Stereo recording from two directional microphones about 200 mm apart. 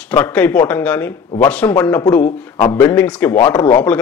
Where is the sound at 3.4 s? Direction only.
20° left (ahead or behind).